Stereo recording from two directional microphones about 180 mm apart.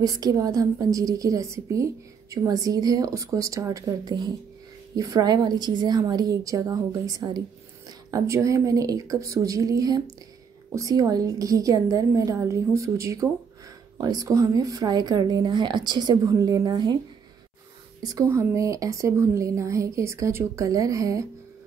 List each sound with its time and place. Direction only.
0.0 s speech: 20° right (ahead or behind)
18.0 s a woman's voice: 20° right (ahead or behind)